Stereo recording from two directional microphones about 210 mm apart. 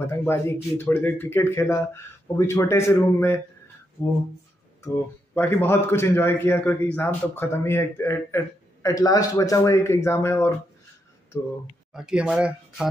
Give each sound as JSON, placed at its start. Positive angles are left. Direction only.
{"t": 0.0, "sound": "a man's voice", "side_deg": 10}
{"t": 11.9, "sound": "speech", "side_deg": -5}